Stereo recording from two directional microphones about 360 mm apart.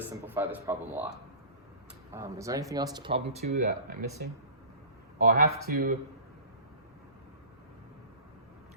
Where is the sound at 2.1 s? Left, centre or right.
Centre; by 5.9 s right.